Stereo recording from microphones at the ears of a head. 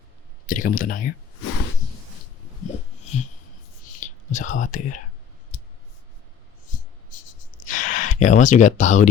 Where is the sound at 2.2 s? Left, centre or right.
Left.